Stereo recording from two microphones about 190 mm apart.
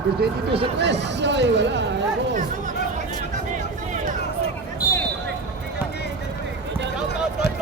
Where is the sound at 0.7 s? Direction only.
65° right (ahead or behind).